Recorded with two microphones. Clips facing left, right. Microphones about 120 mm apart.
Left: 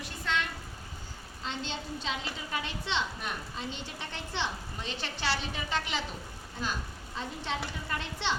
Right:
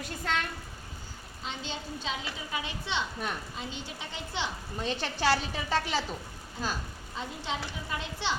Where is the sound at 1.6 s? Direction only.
10° right (ahead or behind).